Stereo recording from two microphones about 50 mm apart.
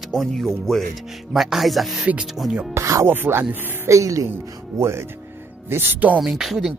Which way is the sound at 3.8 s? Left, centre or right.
Right.